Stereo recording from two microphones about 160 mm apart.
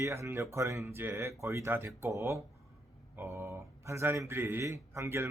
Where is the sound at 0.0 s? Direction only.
15° right (ahead or behind).